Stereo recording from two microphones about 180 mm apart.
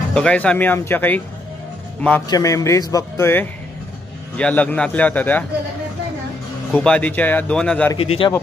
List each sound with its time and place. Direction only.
0.1 s a man's voice: 5° left (ahead or behind)
2.2 s speech: 20° left (ahead or behind)
6.7 s speech: 5° left (ahead or behind)
8.0 s a man's voice: 30° left (ahead or behind)